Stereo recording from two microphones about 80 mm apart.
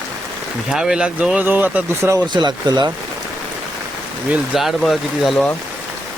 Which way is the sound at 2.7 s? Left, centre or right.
Right.